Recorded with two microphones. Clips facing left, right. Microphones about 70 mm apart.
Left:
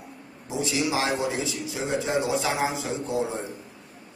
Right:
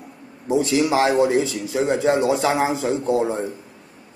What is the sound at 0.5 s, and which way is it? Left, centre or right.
A man's voice, right.